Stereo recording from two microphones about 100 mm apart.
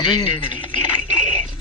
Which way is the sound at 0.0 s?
50° left (ahead or behind).